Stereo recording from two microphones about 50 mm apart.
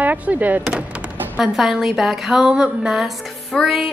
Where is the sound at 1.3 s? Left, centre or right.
Centre.